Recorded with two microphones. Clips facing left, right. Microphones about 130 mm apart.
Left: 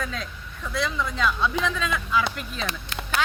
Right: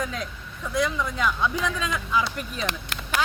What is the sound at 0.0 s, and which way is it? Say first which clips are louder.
Speech: right 2 dB; 15° right (ahead or behind).